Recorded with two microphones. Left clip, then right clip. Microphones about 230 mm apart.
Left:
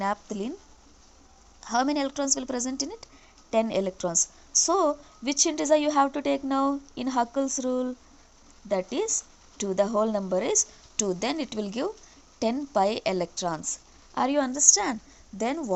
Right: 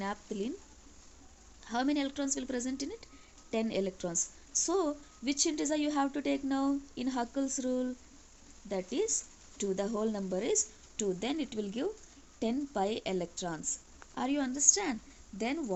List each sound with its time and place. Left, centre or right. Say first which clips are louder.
0.0 s a woman's voice: left 8 dB; centre
1.6 s a woman's voice: left 7 dB; centre